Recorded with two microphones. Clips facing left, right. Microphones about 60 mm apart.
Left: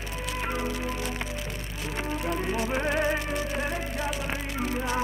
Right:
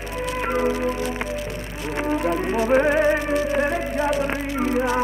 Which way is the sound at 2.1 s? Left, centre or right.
Right.